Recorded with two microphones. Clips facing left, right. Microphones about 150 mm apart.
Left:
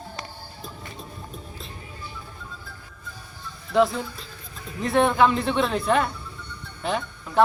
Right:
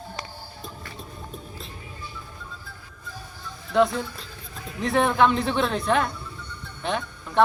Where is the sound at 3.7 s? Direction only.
Centre (ahead or behind).